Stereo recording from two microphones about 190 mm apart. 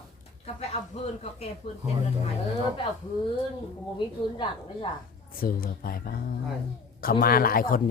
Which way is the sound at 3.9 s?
25° left (ahead or behind).